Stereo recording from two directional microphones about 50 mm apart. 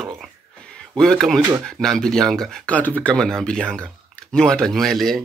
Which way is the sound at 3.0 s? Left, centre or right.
Centre.